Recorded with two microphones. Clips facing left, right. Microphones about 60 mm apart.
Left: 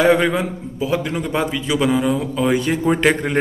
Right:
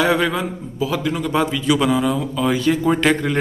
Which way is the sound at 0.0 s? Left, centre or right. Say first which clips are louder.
Left 3 dB; left.